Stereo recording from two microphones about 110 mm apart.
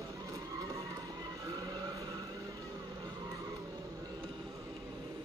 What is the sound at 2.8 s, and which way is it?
Vehicle, 45° right (ahead or behind).